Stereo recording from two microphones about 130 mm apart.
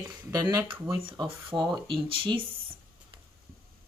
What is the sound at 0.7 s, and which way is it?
Speech, 40° right (ahead or behind).